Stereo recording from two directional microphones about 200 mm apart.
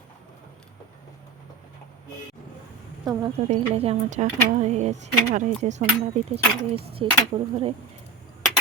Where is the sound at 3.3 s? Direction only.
30° right (ahead or behind).